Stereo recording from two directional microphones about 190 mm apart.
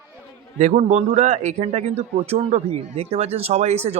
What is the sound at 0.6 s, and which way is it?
A man's voice, 40° right (ahead or behind).